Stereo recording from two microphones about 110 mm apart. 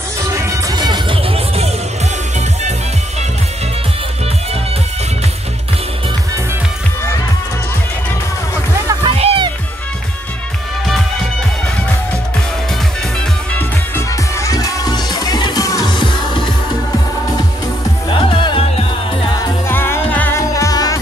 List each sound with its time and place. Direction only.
0.3 s music: 25° right (ahead or behind)
0.7 s music: 40° right (ahead or behind)
9.0 s music: 60° right (ahead or behind)
13.6 s music: 25° left (ahead or behind)
15.9 s music: 45° left (ahead or behind)
18.3 s music: 50° left (ahead or behind)
19.7 s music: 20° left (ahead or behind)
20.5 s music: 35° left (ahead or behind)